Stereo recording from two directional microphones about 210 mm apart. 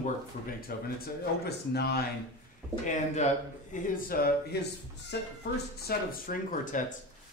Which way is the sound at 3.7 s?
45° left (ahead or behind).